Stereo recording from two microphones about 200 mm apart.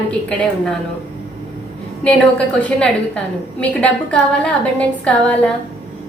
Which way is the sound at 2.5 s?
5° left (ahead or behind).